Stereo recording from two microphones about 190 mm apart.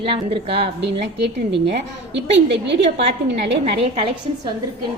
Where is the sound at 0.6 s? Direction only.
60° right (ahead or behind).